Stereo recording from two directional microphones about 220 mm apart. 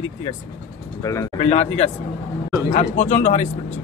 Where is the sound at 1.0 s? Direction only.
15° left (ahead or behind).